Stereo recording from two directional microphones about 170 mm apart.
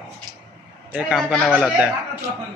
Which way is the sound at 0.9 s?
Centre (ahead or behind).